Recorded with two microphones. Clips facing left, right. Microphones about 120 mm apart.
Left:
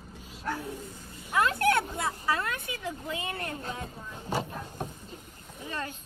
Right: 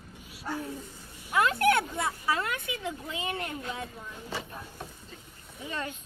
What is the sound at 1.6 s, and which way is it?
Speech, 25° left (ahead or behind).